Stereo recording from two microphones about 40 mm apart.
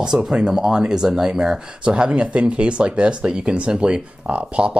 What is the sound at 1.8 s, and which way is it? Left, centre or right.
Speech, right.